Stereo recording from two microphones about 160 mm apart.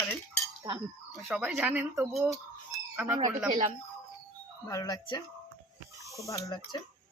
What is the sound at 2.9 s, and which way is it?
Speech, 10° right (ahead or behind).